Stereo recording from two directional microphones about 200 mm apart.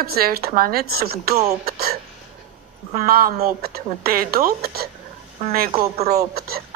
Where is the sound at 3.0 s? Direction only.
50° right (ahead or behind).